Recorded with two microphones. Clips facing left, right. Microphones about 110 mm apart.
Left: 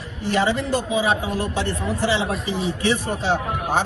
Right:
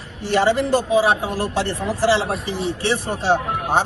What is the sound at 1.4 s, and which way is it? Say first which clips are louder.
Speech: right 2 dB; 70° right (ahead or behind).